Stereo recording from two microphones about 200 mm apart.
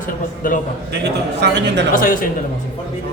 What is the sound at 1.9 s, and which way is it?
Speech, 45° left (ahead or behind).